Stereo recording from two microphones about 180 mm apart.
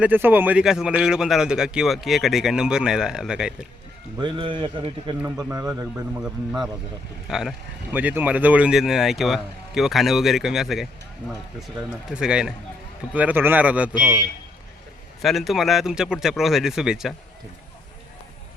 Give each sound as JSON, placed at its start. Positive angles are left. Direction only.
{"t": 0.0, "sound": "a man's voice", "side_deg": -10}
{"t": 4.2, "sound": "a man's voice", "side_deg": -25}
{"t": 5.2, "sound": "a man's voice", "side_deg": -15}
{"t": 6.1, "sound": "a man's voice", "side_deg": -5}
{"t": 15.2, "sound": "a man's voice", "side_deg": 0}